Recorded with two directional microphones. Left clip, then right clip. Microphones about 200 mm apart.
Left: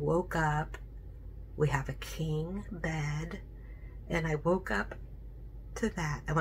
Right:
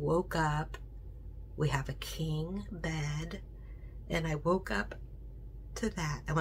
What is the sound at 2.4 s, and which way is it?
Speech, 15° left (ahead or behind).